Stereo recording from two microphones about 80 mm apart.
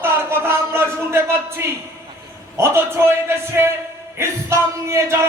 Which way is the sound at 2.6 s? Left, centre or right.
Right.